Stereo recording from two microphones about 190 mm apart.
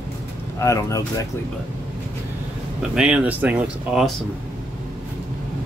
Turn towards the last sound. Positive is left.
turn(degrees=-5)  # may be behind; listen again after turning